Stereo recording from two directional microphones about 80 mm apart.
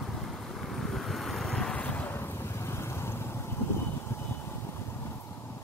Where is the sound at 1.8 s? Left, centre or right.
Left.